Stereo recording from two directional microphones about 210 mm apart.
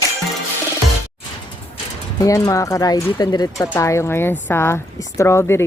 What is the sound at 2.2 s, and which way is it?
Speech, 15° left (ahead or behind).